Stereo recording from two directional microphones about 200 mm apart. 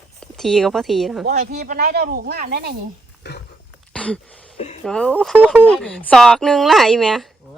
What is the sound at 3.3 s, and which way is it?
Wild animals, 60° left (ahead or behind).